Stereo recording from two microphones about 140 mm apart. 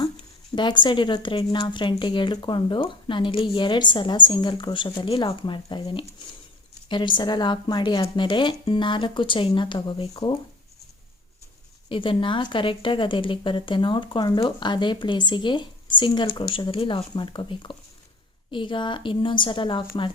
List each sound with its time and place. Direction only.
0.5 s a woman's voice: 35° left (ahead or behind)
11.9 s a woman's voice: 35° left (ahead or behind)